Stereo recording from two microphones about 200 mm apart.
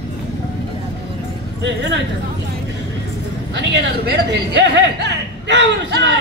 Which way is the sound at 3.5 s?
60° right (ahead or behind).